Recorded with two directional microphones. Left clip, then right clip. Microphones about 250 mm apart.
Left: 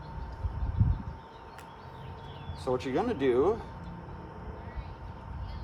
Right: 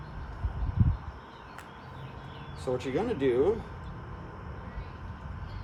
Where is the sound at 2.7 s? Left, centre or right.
Centre.